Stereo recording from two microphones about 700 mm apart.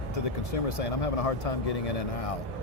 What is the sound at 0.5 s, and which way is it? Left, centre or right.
Speech, left.